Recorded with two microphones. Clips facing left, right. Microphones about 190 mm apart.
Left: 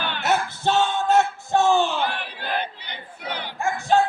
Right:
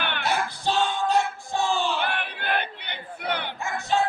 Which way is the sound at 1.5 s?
65° left (ahead or behind).